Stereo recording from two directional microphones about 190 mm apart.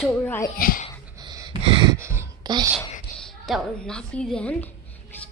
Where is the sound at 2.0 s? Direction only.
15° right (ahead or behind).